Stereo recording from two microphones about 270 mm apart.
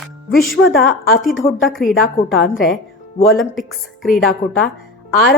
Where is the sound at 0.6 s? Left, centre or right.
Left.